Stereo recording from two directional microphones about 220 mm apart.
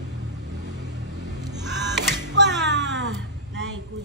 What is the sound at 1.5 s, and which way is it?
Music, 50° right (ahead or behind).